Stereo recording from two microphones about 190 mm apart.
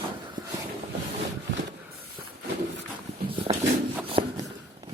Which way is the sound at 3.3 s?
30° right (ahead or behind).